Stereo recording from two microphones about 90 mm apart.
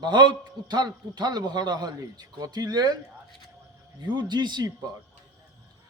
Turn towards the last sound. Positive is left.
turn(degrees=-55)  # may be behind; listen again after turning